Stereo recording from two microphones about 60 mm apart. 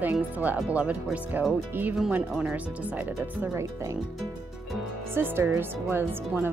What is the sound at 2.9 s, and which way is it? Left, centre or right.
Speech, right.